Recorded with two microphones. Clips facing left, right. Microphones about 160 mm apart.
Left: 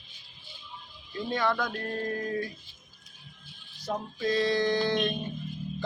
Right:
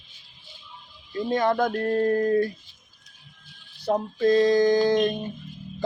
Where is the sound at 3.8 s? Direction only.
50° right (ahead or behind).